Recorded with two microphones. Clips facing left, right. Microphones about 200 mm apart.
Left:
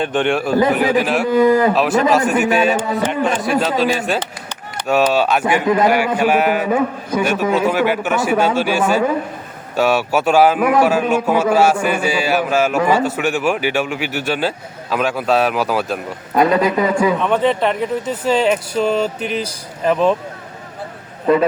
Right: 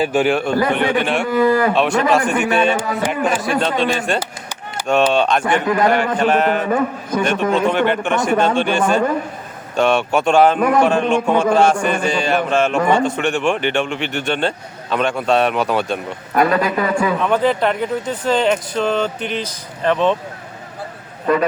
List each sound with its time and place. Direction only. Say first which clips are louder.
0.0 s a man's voice: right 1 dB; 5° right (ahead or behind)
1.3 s a man's voice: left 3 dB; 20° left (ahead or behind)
1.7 s a man's voice: left 1 dB; centre (ahead or behind)
16.3 s a man's voice: left 2 dB; 20° left (ahead or behind)
17.2 s a man's voice: even; centre (ahead or behind)
21.3 s a man's voice: left 3 dB; 25° left (ahead or behind)